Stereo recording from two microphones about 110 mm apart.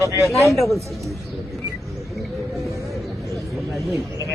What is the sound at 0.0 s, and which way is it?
Speech, 25° right (ahead or behind).